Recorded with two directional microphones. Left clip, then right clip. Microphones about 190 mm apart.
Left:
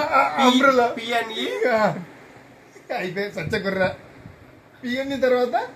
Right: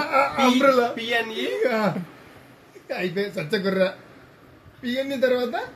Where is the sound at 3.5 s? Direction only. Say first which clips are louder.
Even; 45° right (ahead or behind).